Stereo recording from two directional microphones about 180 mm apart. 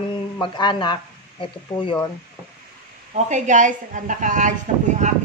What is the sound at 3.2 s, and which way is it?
A woman's voice, 40° right (ahead or behind).